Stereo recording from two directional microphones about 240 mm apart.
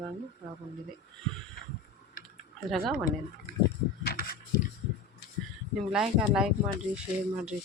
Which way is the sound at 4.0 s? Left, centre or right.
Left.